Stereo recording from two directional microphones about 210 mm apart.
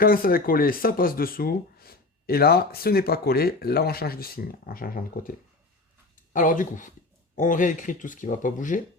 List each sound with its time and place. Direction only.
0.0 s speech: 45° left (ahead or behind)
6.3 s speech: 40° left (ahead or behind)